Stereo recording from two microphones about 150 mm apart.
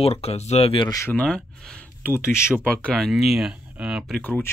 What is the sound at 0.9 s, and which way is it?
Speech, 20° left (ahead or behind).